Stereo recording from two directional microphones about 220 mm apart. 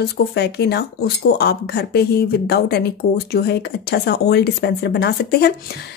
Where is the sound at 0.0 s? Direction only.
50° left (ahead or behind).